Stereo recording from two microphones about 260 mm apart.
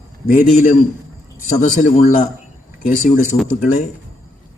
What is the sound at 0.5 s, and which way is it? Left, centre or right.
A man's voice, left.